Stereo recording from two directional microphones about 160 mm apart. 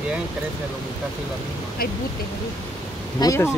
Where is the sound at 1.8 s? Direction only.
65° left (ahead or behind).